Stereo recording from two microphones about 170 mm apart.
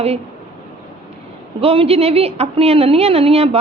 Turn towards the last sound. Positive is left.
turn(degrees=-35)  # may be behind; listen again after turning